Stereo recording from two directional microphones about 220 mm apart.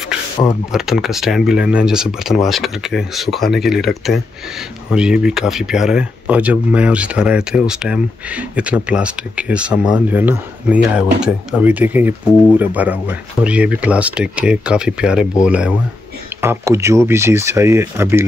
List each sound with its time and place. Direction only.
0.7 s speech: centre (ahead or behind)